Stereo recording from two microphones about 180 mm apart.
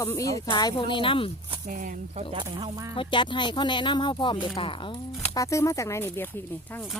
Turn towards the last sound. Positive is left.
turn(degrees=10)  # may be behind; listen again after turning